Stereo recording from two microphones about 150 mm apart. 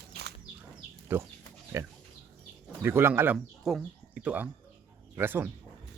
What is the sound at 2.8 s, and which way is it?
Speech, 15° right (ahead or behind).